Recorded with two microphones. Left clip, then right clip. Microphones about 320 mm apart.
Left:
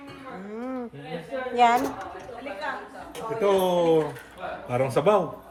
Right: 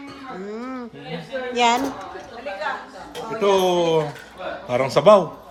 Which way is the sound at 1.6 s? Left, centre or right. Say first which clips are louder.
Right 1 dB; centre.